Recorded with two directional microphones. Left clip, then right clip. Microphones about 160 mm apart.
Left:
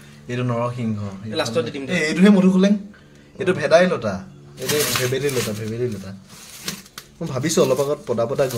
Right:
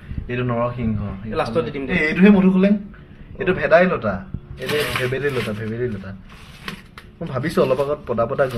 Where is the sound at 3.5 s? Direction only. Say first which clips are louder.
Right 1 dB; 15° left (ahead or behind).